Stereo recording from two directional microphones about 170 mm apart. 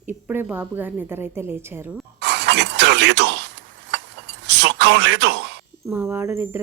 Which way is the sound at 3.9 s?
90° right.